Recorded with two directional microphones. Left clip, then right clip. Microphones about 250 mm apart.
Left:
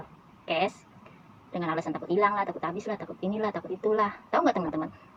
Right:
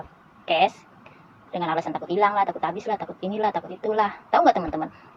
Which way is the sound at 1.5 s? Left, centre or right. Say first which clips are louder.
Right 5 dB; centre.